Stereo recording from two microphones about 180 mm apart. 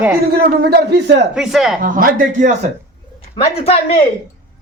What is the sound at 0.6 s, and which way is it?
Speech, 70° right (ahead or behind).